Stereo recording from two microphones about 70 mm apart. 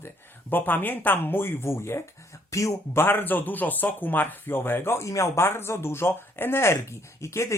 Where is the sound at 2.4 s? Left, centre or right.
Left.